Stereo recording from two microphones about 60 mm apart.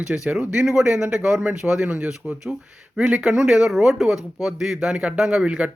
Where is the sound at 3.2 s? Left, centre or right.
Centre.